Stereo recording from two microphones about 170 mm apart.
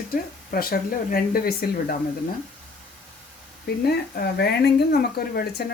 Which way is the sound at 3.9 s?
70° left (ahead or behind).